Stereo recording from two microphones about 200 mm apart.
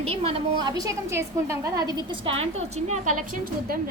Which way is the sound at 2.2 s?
30° right (ahead or behind).